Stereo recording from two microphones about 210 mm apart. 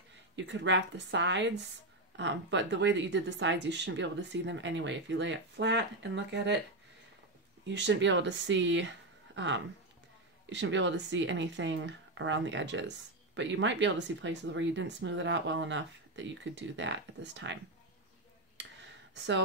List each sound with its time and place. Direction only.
0.4 s speech: 60° right (ahead or behind)
7.6 s speech: 55° right (ahead or behind)
19.1 s speech: 60° right (ahead or behind)